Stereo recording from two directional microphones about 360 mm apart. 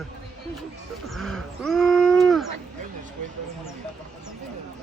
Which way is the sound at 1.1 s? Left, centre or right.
Centre.